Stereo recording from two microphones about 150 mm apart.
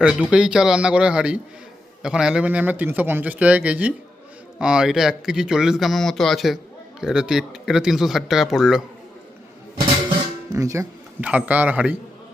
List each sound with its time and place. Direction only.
0.0 s a man's voice: 5° right (ahead or behind)
10.5 s speech: 20° right (ahead or behind)
11.2 s a man's voice: 10° right (ahead or behind)